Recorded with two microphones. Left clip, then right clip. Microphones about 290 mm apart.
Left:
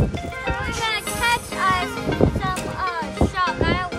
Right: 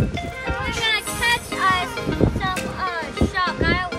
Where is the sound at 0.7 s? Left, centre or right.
Left.